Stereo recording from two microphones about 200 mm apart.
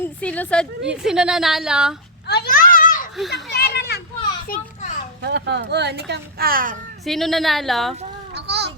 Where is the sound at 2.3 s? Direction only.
50° left (ahead or behind).